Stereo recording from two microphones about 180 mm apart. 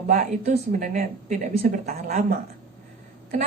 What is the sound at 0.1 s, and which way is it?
A woman's voice, 45° right (ahead or behind).